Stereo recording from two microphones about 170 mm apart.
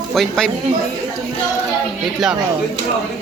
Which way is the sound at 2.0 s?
5° right (ahead or behind).